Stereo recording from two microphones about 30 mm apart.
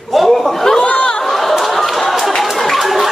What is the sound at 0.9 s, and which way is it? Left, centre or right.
Chatter, left.